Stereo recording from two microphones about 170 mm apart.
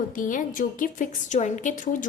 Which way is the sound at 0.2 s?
50° left (ahead or behind).